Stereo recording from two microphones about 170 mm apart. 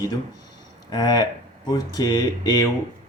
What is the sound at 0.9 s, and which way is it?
Speech, 25° left (ahead or behind).